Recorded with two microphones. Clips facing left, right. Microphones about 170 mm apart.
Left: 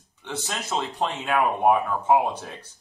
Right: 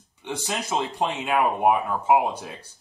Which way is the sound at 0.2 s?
10° right (ahead or behind).